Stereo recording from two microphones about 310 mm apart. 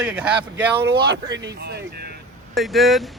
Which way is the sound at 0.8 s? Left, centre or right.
Right.